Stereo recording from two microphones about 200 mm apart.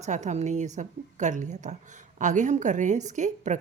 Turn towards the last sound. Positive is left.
turn(degrees=-35)  # may be behind; listen again after turning